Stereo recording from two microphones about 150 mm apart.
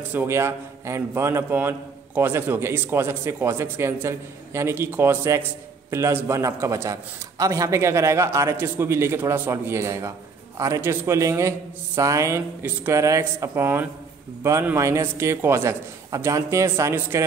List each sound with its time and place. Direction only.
0.1 s a man's voice: 15° right (ahead or behind)